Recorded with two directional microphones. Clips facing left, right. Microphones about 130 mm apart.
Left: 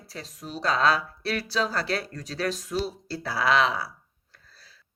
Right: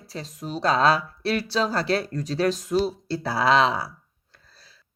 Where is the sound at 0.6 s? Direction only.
30° right (ahead or behind).